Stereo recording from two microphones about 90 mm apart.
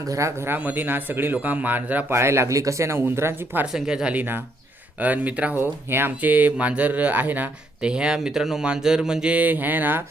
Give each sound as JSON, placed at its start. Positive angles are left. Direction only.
{"t": 0.1, "sound": "a man's voice", "side_deg": -30}
{"t": 2.1, "sound": "speech", "side_deg": -30}
{"t": 3.7, "sound": "speech", "side_deg": -5}